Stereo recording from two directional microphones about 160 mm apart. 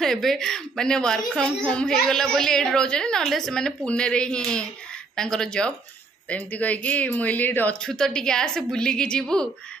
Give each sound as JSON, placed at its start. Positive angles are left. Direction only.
{"t": 0.0, "sound": "a woman's voice", "side_deg": 0}